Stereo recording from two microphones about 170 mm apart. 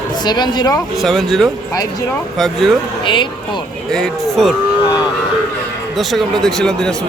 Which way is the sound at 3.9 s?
Centre (ahead or behind).